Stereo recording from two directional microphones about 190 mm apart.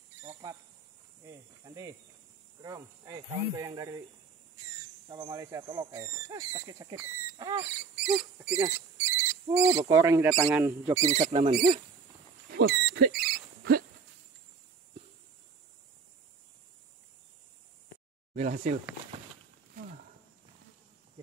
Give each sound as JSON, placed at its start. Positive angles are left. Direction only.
{"t": 0.3, "sound": "cricket", "side_deg": -20}
{"t": 1.6, "sound": "speech", "side_deg": -15}
{"t": 5.1, "sound": "speech", "side_deg": -15}
{"t": 7.9, "sound": "rodents", "side_deg": -5}
{"t": 8.6, "sound": "cricket", "side_deg": -10}
{"t": 9.8, "sound": "speech", "side_deg": -15}
{"t": 11.1, "sound": "speech", "side_deg": -35}
{"t": 12.4, "sound": "a sound", "side_deg": -60}
{"t": 18.5, "sound": "speech", "side_deg": -50}